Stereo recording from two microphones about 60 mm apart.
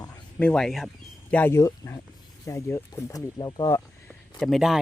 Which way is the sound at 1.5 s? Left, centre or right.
Left.